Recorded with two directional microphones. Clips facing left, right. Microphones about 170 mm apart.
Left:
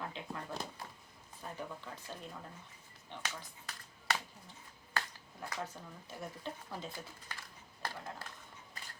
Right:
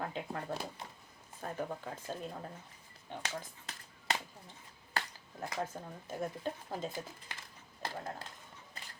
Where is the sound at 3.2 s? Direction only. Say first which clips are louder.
Right 2 dB; 20° right (ahead or behind).